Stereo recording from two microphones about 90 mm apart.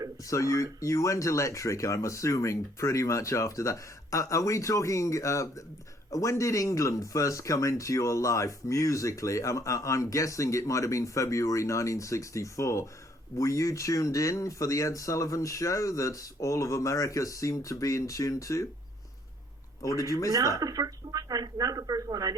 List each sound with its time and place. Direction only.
0.3 s speech: 35° left (ahead or behind)
19.8 s speech: 40° left (ahead or behind)
20.3 s a sound: 40° right (ahead or behind)